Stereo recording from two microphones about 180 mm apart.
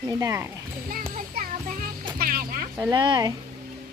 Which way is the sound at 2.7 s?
20° right (ahead or behind).